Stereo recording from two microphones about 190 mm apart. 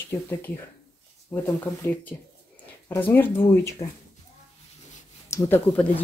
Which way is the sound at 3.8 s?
30° left (ahead or behind).